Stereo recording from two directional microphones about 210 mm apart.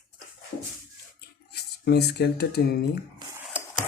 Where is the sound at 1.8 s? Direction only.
50° left (ahead or behind).